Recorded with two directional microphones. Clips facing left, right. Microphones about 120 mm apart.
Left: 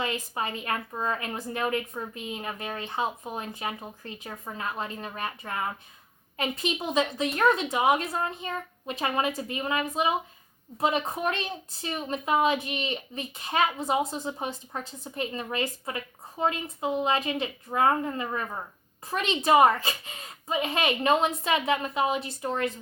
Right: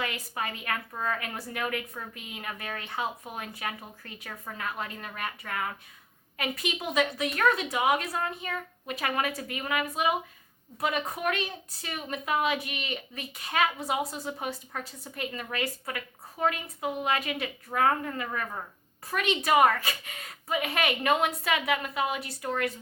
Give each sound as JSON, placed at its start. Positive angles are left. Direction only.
{"t": 0.0, "sound": "a woman's voice", "side_deg": 25}